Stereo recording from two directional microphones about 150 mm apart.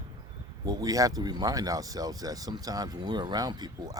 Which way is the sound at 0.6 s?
25° right (ahead or behind).